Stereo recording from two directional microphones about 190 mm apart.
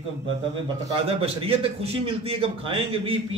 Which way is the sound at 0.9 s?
30° right (ahead or behind).